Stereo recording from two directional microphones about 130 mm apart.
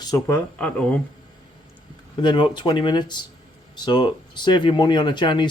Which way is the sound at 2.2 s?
35° left (ahead or behind).